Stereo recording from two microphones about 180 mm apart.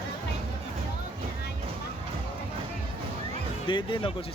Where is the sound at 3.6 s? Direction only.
25° left (ahead or behind).